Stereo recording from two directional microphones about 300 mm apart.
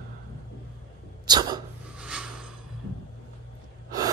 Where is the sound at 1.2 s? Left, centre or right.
Centre.